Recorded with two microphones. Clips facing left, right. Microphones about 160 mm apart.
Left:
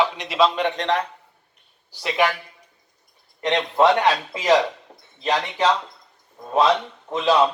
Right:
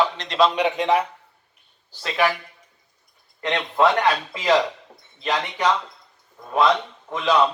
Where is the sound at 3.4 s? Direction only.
20° left (ahead or behind).